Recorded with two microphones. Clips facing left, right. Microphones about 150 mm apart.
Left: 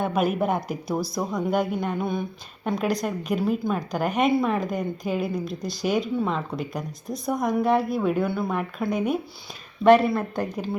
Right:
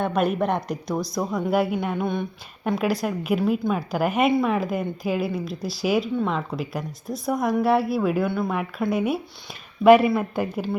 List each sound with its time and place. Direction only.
0.0 s a woman's voice: 5° left (ahead or behind)